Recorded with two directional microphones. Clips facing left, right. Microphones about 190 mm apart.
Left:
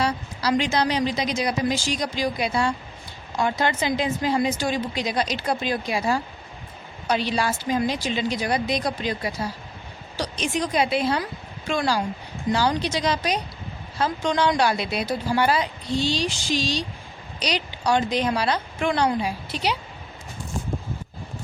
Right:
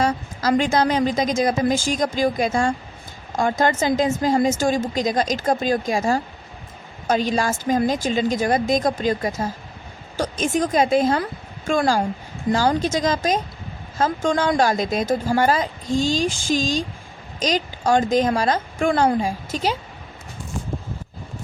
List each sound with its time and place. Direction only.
0.0 s a woman's voice: 45° right (ahead or behind)